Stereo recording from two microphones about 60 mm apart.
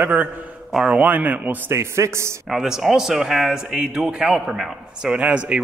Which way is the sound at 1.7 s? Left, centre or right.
Right.